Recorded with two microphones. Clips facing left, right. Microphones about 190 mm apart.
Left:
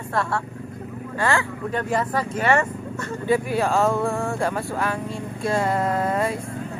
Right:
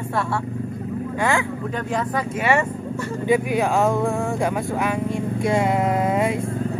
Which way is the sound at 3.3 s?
15° right (ahead or behind).